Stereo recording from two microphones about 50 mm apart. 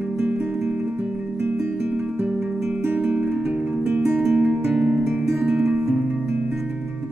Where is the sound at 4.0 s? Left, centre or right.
Centre.